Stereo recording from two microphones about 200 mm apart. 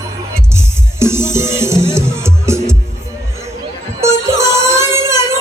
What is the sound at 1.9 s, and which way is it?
Music, 15° right (ahead or behind).